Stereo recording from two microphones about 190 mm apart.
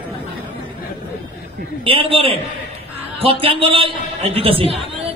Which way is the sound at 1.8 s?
30° right (ahead or behind).